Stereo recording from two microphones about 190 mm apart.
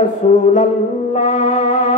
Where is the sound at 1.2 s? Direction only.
40° left (ahead or behind).